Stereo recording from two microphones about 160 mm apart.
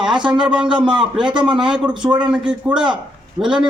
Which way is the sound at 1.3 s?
30° right (ahead or behind).